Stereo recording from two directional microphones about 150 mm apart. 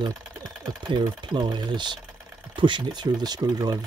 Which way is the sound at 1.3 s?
30° right (ahead or behind).